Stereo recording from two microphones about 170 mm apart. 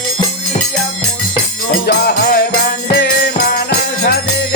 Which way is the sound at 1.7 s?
80° left.